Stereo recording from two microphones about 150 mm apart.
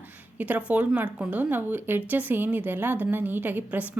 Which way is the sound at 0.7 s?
10° right (ahead or behind).